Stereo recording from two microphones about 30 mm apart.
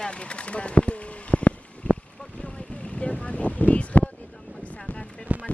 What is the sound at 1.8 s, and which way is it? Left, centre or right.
Vehicle, left.